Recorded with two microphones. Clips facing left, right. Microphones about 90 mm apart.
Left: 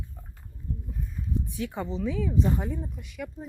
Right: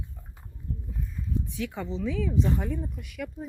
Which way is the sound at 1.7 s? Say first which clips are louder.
Left 2 dB; 15° left (ahead or behind).